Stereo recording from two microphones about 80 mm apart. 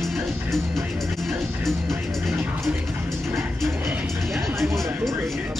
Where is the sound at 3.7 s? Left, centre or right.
Right.